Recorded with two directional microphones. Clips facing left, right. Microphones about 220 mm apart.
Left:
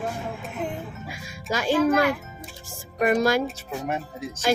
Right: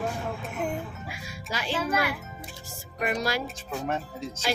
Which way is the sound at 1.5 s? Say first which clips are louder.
Left 8 dB; 45° left (ahead or behind).